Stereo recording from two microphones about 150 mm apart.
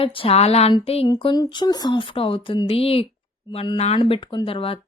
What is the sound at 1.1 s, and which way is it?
A woman's voice, 30° left (ahead or behind).